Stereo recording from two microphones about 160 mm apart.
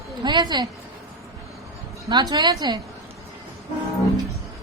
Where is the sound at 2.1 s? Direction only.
25° right (ahead or behind).